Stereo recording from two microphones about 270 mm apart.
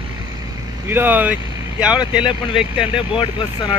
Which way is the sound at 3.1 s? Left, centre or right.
Centre.